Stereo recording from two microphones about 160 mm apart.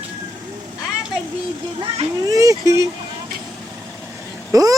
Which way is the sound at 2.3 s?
20° right (ahead or behind).